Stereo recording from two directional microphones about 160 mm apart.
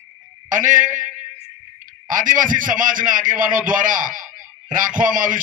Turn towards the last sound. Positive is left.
turn(degrees=-55)  # may be behind; listen again after turning